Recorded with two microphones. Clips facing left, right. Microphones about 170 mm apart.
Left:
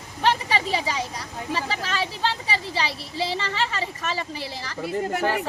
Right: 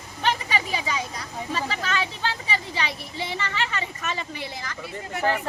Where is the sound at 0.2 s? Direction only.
30° left (ahead or behind).